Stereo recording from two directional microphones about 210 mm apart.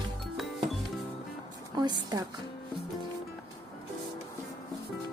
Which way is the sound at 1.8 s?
20° right (ahead or behind).